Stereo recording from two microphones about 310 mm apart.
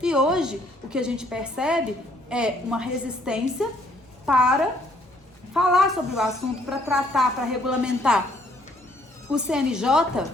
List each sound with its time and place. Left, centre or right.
0.0 s a woman's voice: centre
5.5 s a woman's voice: centre
9.3 s a woman's voice: centre